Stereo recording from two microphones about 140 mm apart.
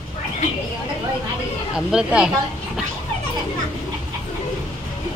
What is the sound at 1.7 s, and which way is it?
Speech, 5° right (ahead or behind).